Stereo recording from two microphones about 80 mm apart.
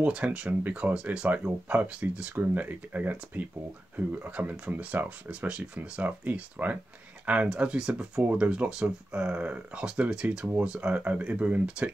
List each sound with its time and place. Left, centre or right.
0.0 s speech: centre